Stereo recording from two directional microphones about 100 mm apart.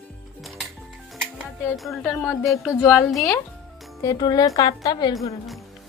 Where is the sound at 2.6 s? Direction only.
30° left (ahead or behind).